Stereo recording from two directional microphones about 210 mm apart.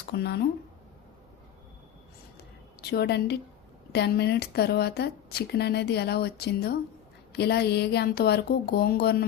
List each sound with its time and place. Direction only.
0.1 s speech: 50° left (ahead or behind)
2.9 s speech: 50° left (ahead or behind)